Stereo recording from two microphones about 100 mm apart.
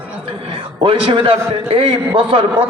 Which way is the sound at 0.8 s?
60° right (ahead or behind).